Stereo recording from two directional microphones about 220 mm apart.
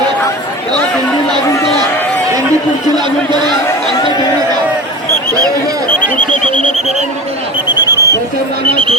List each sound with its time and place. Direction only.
6.3 s speech: 35° left (ahead or behind)
7.9 s a sound: 15° left (ahead or behind)
8.7 s speech: 25° right (ahead or behind)